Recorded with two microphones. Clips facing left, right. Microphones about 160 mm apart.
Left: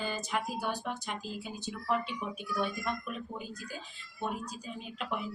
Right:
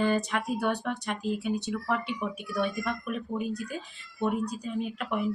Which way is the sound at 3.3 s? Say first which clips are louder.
Right 10 dB; 70° right (ahead or behind).